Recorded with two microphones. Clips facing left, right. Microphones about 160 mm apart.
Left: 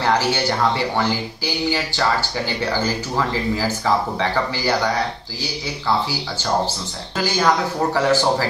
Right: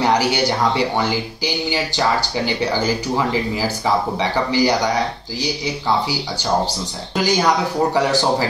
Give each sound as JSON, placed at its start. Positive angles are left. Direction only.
{"t": 0.0, "sound": "speech", "side_deg": -15}
{"t": 7.2, "sound": "speech", "side_deg": -15}